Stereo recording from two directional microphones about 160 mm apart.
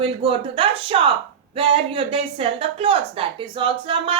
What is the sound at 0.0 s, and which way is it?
Speech, 35° right (ahead or behind).